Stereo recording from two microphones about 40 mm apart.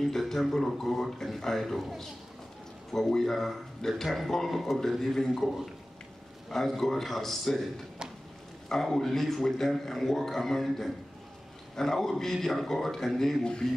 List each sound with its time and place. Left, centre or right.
0.0 s a man's voice: centre
2.9 s a man's voice: centre
8.9 s a man's voice: centre
13.4 s speech: centre